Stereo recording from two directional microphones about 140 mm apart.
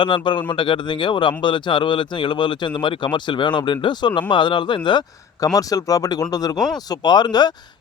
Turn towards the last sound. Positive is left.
turn(degrees=30)  # may be behind; listen again after turning